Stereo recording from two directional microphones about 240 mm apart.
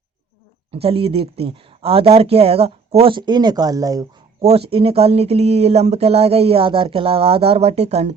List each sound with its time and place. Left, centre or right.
0.7 s speech: right